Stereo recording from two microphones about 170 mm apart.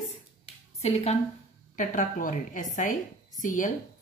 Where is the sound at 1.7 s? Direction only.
50° left (ahead or behind).